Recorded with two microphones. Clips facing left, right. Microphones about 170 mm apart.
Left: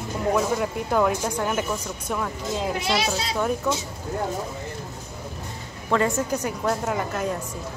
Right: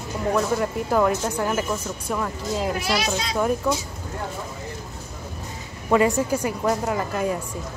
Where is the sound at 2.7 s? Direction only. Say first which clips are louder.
Even; 25° left (ahead or behind).